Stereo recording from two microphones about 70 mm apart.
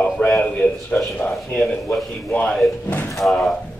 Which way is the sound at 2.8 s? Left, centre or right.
Left.